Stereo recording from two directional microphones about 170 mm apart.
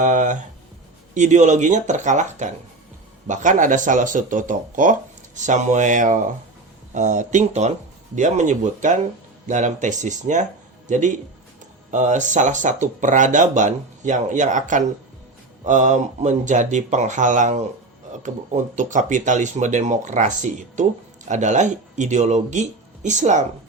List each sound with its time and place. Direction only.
0.0 s speech: 45° right (ahead or behind)